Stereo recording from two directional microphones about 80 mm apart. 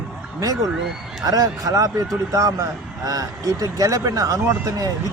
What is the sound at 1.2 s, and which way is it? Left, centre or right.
Speech, right.